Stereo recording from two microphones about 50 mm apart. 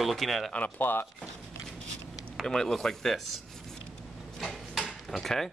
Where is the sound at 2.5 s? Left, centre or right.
Centre.